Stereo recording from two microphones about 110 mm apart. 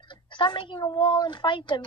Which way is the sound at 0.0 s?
50° left (ahead or behind).